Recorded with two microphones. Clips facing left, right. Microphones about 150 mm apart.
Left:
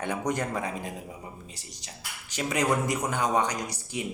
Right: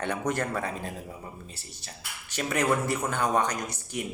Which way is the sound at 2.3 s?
15° left (ahead or behind).